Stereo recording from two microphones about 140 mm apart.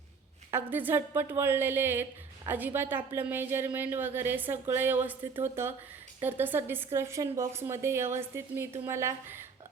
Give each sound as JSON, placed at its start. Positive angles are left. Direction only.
{"t": 0.5, "sound": "a woman's voice", "side_deg": -15}